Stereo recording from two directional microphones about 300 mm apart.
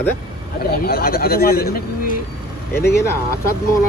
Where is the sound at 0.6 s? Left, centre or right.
Left.